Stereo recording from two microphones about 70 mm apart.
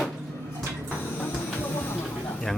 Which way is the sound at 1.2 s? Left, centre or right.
Left.